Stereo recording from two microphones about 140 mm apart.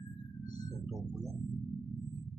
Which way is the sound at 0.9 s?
25° right (ahead or behind).